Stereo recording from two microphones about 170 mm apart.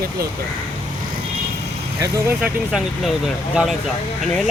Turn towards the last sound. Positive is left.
turn(degrees=-5)  # may be behind; listen again after turning